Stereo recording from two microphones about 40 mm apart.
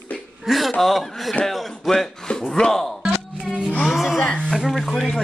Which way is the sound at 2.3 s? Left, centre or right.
Left.